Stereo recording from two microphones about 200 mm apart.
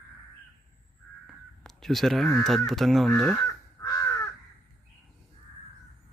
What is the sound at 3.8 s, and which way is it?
Crow, 20° left (ahead or behind).